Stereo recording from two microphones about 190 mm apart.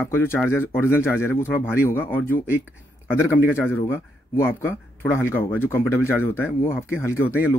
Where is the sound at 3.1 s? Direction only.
10° left (ahead or behind).